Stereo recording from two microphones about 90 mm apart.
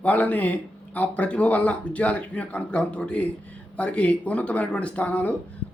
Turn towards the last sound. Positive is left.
turn(degrees=15)  # may be behind; listen again after turning